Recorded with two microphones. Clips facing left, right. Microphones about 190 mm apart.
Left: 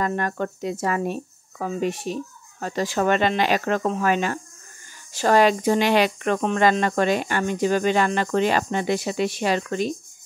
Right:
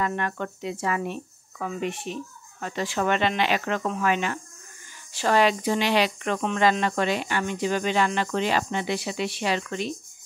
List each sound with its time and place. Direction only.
0.0 s speech: 40° left (ahead or behind)